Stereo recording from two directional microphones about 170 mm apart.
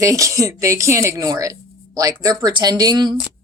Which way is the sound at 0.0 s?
20° right (ahead or behind).